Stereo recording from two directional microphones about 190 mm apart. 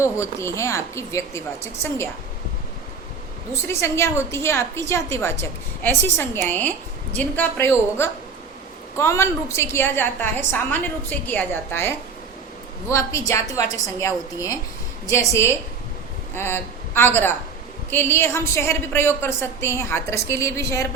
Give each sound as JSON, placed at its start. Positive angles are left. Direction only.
{"t": 0.0, "sound": "a woman's voice", "side_deg": 15}
{"t": 3.7, "sound": "a woman's voice", "side_deg": 15}